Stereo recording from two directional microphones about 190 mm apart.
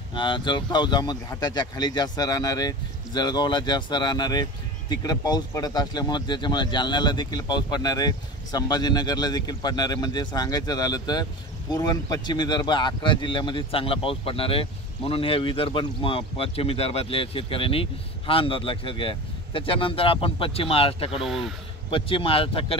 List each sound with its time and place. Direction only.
0.1 s speech: 25° left (ahead or behind)
21.2 s speech: centre (ahead or behind)
21.9 s speech: 25° left (ahead or behind)